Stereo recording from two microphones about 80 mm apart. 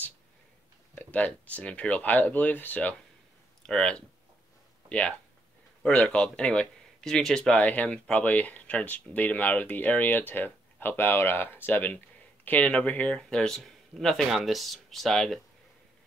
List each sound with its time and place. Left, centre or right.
0.9 s speech: centre
3.6 s speech: centre